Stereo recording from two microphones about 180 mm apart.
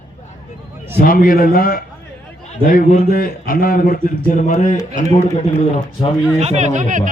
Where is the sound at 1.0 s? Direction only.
50° left (ahead or behind).